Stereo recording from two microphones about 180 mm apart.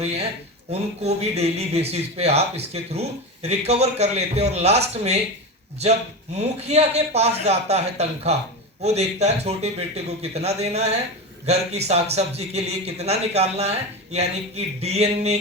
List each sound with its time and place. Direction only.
0.0 s speech: 35° right (ahead or behind)
6.3 s speech: 35° right (ahead or behind)